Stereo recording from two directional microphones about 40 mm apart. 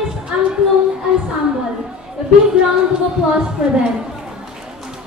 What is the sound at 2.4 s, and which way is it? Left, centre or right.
Speech, centre.